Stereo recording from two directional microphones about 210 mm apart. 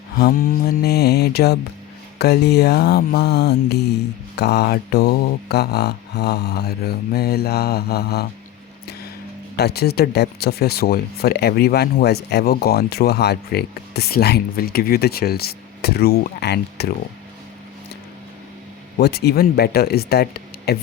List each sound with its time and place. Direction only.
0.2 s speech: 45° left (ahead or behind)
9.6 s speech: 50° left (ahead or behind)
18.9 s speech: 50° left (ahead or behind)